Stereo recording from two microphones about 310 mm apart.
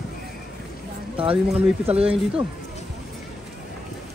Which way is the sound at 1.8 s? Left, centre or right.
Centre.